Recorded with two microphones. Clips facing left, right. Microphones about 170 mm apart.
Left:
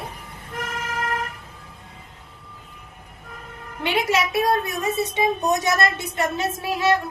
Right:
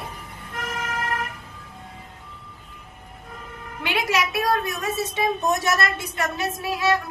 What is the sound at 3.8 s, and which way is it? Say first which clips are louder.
A woman's voice: left 2 dB; 25° left (ahead or behind).